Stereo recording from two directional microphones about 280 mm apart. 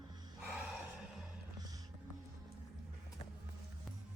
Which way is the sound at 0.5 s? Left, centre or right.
Centre.